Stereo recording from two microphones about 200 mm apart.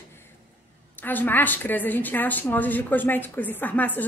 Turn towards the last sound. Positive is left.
turn(degrees=10)  # may be behind; listen again after turning